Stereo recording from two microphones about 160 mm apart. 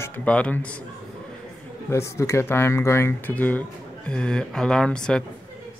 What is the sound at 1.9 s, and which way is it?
Speech, 15° left (ahead or behind).